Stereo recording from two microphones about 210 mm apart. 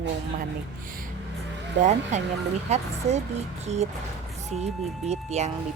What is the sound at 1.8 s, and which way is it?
Speech, 35° right (ahead or behind).